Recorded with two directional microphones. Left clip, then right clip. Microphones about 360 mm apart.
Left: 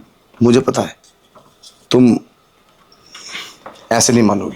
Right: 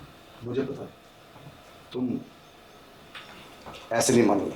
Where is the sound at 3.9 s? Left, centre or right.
Left.